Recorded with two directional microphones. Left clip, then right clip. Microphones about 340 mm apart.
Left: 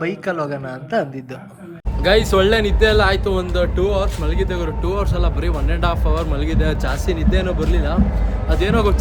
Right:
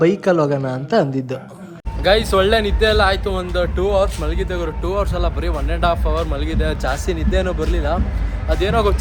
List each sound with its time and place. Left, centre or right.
0.0 s a man's voice: centre
2.0 s speech: centre